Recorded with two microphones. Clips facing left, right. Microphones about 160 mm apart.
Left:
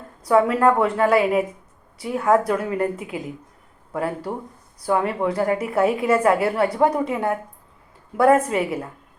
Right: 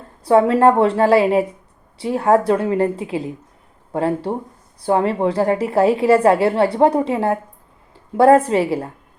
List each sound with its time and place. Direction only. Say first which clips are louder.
0.3 s a woman's voice: right 4 dB; 30° right (ahead or behind)